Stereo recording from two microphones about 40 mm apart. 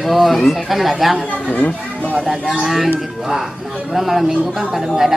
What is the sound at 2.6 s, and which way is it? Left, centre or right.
Speech, centre.